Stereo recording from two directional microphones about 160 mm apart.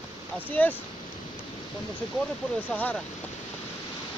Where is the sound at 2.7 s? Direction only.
10° left (ahead or behind).